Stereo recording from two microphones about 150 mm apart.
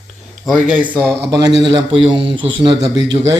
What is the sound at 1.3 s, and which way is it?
Speech, 25° right (ahead or behind).